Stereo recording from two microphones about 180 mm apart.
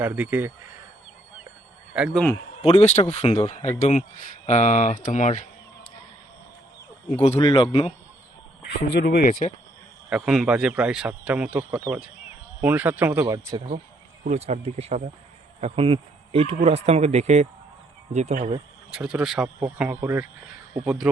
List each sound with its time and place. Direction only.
0.0 s speech: 10° right (ahead or behind)
1.9 s speech: 5° right (ahead or behind)
2.6 s speech: 35° left (ahead or behind)
7.3 s speech: 25° left (ahead or behind)
8.9 s speech: 65° left (ahead or behind)
9.2 s speech: 40° left (ahead or behind)
10.1 s speech: 5° right (ahead or behind)
14.3 s speech: 40° right (ahead or behind)
18.9 s speech: 5° right (ahead or behind)
20.8 s speech: 5° right (ahead or behind)